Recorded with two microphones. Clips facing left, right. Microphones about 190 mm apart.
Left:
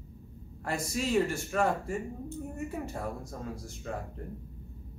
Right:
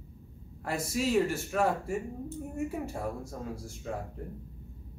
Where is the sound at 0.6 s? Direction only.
5° right (ahead or behind).